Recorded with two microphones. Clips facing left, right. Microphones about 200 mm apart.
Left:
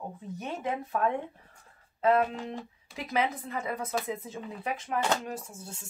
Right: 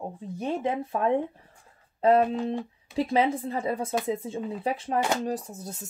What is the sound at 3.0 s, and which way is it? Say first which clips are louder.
Speech: right 6 dB; 30° right (ahead or behind).